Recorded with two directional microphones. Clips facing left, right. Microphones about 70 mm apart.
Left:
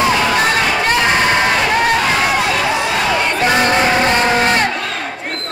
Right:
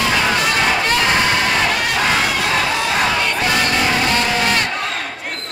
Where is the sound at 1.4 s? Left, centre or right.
Left.